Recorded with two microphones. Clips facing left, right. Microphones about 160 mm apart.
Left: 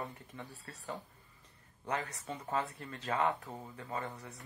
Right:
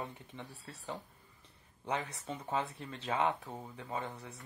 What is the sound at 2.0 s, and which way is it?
Speech, 15° right (ahead or behind).